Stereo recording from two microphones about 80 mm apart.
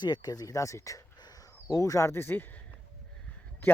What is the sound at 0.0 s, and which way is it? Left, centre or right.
Speech, left.